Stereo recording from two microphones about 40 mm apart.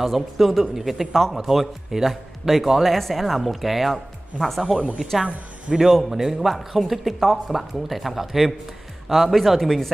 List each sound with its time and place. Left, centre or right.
0.0 s speech: centre
4.7 s speech: right
6.0 s a man's voice: centre